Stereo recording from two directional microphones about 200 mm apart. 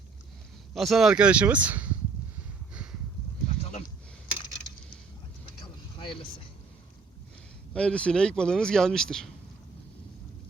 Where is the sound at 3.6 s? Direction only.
35° left (ahead or behind).